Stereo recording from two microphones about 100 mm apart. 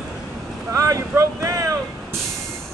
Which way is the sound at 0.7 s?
30° right (ahead or behind).